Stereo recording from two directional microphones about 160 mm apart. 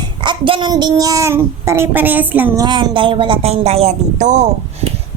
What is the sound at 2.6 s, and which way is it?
A woman's voice, 30° right (ahead or behind).